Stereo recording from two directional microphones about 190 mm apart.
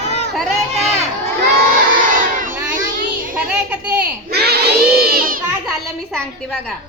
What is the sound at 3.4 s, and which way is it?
Speech, 5° right (ahead or behind).